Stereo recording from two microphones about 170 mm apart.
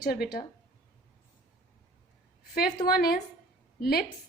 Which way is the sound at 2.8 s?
65° left (ahead or behind).